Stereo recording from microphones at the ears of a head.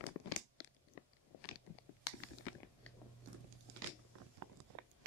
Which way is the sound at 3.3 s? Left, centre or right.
Right.